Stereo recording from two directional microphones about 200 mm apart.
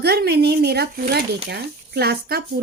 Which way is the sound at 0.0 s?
55° right (ahead or behind).